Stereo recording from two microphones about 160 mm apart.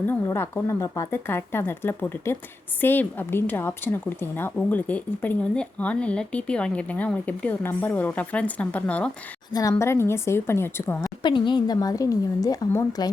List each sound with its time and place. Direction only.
0.1 s a woman's voice: 15° left (ahead or behind)
9.5 s a woman's voice: 20° left (ahead or behind)
11.2 s speech: 30° left (ahead or behind)